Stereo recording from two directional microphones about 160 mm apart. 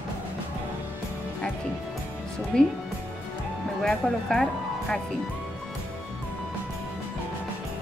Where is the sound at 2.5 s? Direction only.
5° left (ahead or behind).